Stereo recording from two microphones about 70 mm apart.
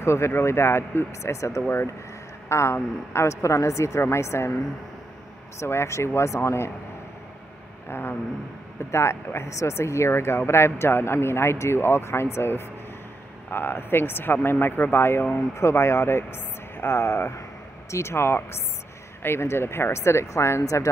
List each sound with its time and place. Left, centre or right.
0.0 s speech: left
5.6 s speech: left
7.9 s speech: left